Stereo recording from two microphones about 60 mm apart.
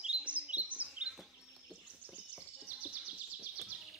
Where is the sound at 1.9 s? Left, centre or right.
Right.